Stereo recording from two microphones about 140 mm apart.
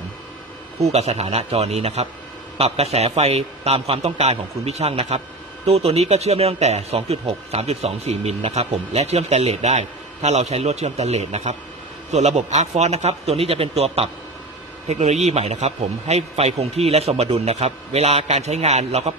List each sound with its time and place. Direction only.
0.7 s speech: 50° right (ahead or behind)